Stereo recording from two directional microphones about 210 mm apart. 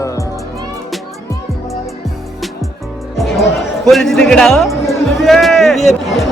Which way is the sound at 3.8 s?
Centre (ahead or behind).